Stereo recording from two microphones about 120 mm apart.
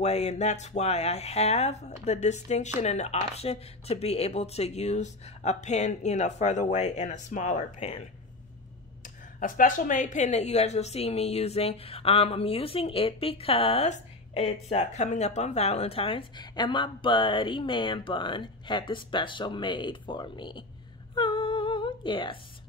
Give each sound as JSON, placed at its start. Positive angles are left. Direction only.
{"t": 0.0, "sound": "speech", "side_deg": 65}
{"t": 9.0, "sound": "a woman's voice", "side_deg": 90}
{"t": 21.1, "sound": "humming", "side_deg": 40}